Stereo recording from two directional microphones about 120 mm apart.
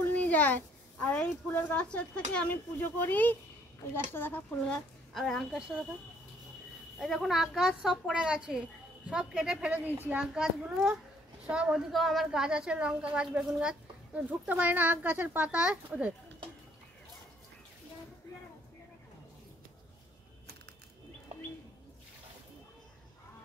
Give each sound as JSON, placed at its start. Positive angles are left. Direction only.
{"t": 0.0, "sound": "a sound", "side_deg": 10}
{"t": 1.0, "sound": "speech", "side_deg": 15}
{"t": 5.1, "sound": "a woman's voice", "side_deg": 0}
{"t": 7.0, "sound": "a woman's voice", "side_deg": 0}